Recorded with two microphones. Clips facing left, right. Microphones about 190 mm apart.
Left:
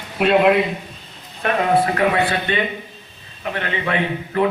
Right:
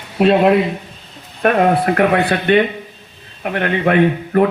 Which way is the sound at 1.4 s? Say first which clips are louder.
Right 4 dB; 55° right (ahead or behind).